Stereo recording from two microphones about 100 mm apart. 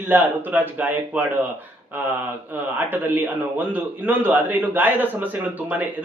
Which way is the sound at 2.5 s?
20° right (ahead or behind).